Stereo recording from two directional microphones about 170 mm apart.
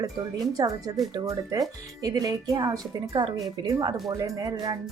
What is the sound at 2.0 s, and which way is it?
A woman's voice, 20° right (ahead or behind).